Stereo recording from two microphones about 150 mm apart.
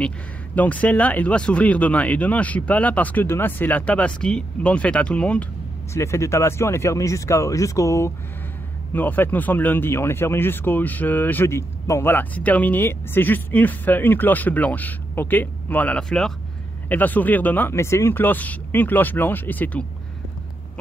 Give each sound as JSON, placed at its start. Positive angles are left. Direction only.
{"t": 0.6, "sound": "speech", "side_deg": 10}
{"t": 5.9, "sound": "speech", "side_deg": 20}